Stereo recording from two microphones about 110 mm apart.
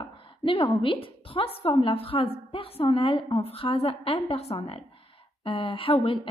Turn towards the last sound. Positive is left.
turn(degrees=55)  # may be behind; listen again after turning